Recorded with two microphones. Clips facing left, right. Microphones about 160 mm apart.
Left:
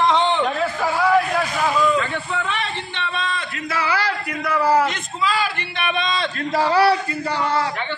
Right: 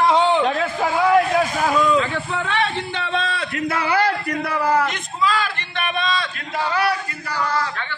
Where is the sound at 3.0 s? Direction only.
85° right; by 4.4 s 50° right (ahead or behind).